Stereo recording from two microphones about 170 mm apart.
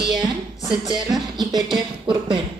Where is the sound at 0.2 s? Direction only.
25° right (ahead or behind).